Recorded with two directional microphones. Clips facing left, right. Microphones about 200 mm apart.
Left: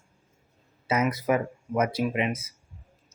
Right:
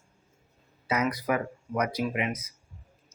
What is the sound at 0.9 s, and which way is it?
Speech, 25° left (ahead or behind).